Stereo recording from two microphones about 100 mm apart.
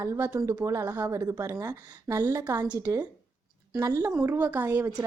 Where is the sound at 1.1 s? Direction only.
30° right (ahead or behind).